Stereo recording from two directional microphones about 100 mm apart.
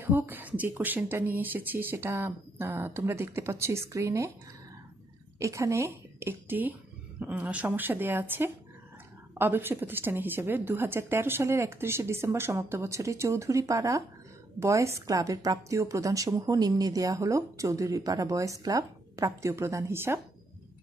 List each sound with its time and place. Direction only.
0.0 s a woman's voice: 20° right (ahead or behind)
5.4 s a woman's voice: 30° right (ahead or behind)